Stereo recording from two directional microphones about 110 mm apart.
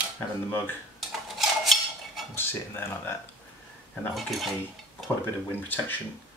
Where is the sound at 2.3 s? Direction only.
20° left (ahead or behind).